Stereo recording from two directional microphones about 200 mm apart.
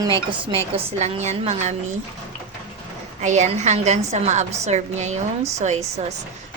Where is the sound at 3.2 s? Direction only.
35° right (ahead or behind).